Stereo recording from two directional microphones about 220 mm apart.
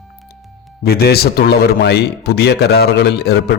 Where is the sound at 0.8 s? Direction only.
45° left (ahead or behind).